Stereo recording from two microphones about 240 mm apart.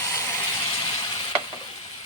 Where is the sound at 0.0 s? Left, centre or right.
Centre.